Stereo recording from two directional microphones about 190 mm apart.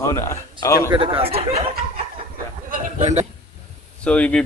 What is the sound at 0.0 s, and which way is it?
Speech, 15° left (ahead or behind).